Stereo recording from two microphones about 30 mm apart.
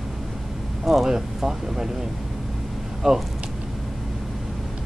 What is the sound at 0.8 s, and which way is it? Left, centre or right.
Speech, centre.